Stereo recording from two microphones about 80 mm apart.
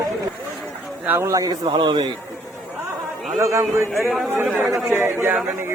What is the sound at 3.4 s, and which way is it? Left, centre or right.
Speech, right.